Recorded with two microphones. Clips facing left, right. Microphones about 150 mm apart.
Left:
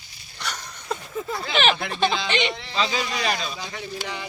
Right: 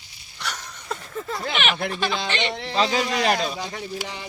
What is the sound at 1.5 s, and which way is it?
Speech, 35° left (ahead or behind).